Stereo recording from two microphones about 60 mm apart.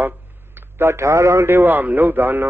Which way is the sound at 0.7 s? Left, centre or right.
Right.